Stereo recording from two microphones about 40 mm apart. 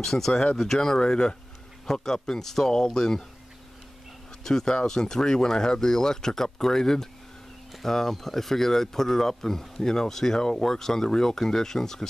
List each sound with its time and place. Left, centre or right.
0.0 s speech: centre
4.5 s speech: centre